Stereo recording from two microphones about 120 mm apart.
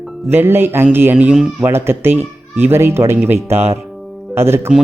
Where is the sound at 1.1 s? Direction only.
5° right (ahead or behind).